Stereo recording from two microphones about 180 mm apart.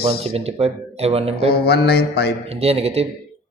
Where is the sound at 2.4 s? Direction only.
35° right (ahead or behind).